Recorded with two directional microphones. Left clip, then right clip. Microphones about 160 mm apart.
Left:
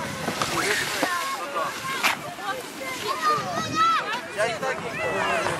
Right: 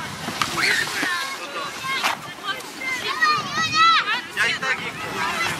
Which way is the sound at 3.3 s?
15° right (ahead or behind).